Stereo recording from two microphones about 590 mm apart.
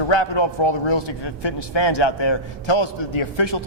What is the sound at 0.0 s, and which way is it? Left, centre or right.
A man's voice, left.